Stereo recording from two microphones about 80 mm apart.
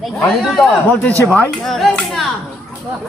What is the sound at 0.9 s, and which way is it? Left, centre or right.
Speech, centre.